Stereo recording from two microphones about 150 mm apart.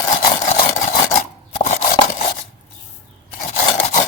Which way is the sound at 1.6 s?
50° left (ahead or behind).